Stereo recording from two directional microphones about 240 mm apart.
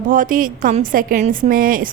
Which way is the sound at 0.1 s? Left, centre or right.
Right.